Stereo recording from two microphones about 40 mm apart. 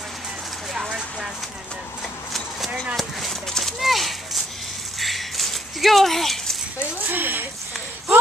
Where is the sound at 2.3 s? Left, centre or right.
Centre.